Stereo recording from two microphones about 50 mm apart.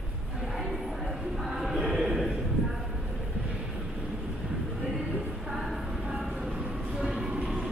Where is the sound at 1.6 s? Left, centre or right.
Centre.